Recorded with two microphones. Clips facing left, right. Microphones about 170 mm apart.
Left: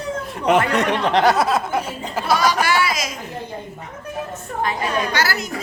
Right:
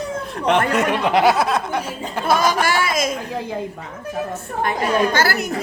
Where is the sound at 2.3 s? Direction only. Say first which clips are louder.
Right 1 dB; 50° right (ahead or behind).